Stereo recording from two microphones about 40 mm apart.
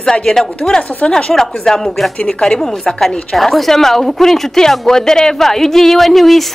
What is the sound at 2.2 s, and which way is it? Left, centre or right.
A woman's voice, left.